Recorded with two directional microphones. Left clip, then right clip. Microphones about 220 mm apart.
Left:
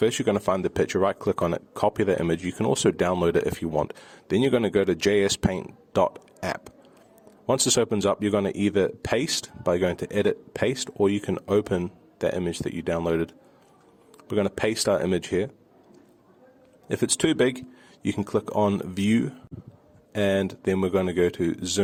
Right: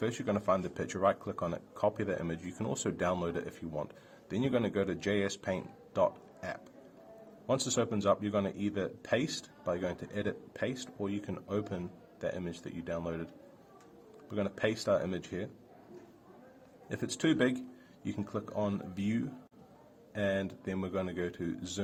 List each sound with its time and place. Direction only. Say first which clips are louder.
0.0 s speech: left 11 dB; 50° left (ahead or behind)
16.9 s speech: left 8 dB; 50° left (ahead or behind)